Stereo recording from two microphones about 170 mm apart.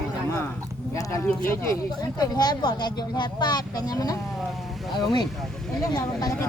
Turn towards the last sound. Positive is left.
turn(degrees=20)  # may be behind; listen again after turning